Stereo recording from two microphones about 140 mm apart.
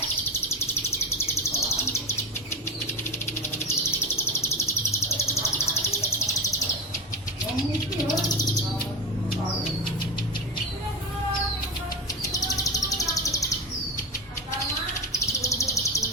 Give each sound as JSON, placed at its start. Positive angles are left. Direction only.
{"t": 1.2, "sound": "bird", "side_deg": 20}
{"t": 3.7, "sound": "bird", "side_deg": 15}
{"t": 12.2, "sound": "bird", "side_deg": 25}
{"t": 15.3, "sound": "bird", "side_deg": 20}